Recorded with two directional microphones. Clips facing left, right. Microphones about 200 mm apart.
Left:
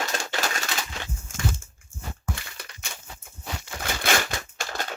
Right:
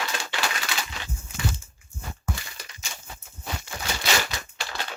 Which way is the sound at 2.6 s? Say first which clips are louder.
Left 2 dB; 60° left (ahead or behind).